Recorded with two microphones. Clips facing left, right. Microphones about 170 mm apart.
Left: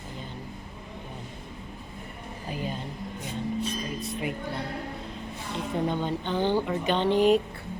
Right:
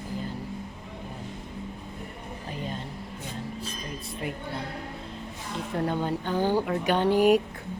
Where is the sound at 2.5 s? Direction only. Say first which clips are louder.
Left 2 dB; 5° left (ahead or behind).